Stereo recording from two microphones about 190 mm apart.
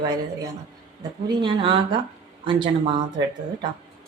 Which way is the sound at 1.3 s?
25° right (ahead or behind).